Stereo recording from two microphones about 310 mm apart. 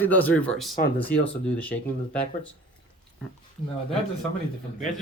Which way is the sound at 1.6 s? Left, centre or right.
Centre.